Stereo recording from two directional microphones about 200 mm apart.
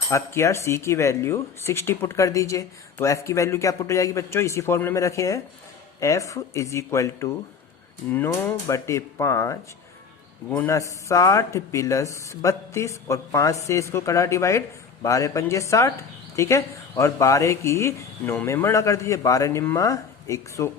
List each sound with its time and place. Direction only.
0.1 s speech: 15° left (ahead or behind)